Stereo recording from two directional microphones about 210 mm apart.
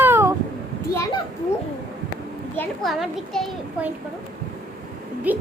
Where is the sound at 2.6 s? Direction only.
Centre (ahead or behind).